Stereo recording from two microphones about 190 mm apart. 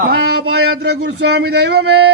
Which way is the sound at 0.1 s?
60° right (ahead or behind).